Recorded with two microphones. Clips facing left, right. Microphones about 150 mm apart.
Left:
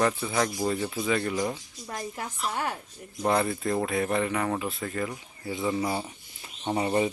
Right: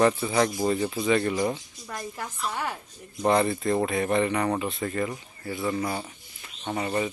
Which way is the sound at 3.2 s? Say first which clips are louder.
Right 3 dB; centre (ahead or behind).